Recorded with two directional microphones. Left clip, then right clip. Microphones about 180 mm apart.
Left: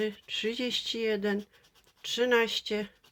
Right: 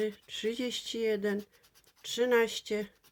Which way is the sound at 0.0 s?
20° right (ahead or behind).